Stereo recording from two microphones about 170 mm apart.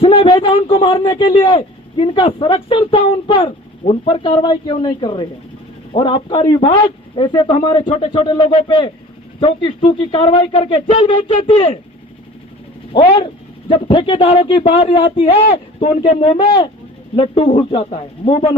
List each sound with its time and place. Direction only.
0.0 s a man's voice: 30° left (ahead or behind)
12.9 s a man's voice: 30° left (ahead or behind)